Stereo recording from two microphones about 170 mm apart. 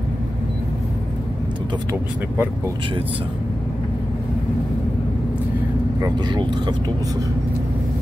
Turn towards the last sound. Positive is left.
turn(degrees=-25)  # may be behind; listen again after turning